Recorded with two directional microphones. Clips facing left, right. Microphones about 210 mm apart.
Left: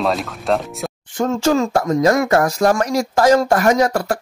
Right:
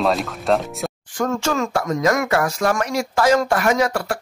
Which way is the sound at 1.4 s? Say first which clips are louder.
Left 5 dB; 35° left (ahead or behind).